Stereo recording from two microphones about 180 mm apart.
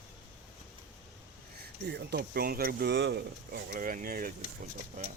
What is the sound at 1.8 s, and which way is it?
Speech, 70° right (ahead or behind).